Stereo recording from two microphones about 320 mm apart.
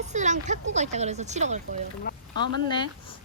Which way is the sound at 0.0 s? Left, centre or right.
Right.